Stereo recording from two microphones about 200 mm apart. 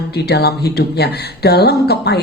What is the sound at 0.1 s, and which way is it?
Speech, 55° left (ahead or behind).